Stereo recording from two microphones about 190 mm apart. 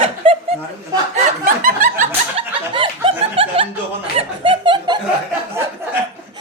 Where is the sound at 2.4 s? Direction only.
30° right (ahead or behind).